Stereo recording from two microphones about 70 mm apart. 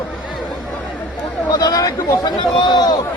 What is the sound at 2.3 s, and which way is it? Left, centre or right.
Speech, left.